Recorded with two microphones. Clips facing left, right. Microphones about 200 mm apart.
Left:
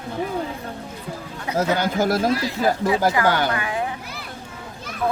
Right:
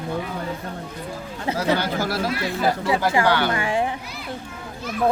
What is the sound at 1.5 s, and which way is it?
Speech, 50° left (ahead or behind).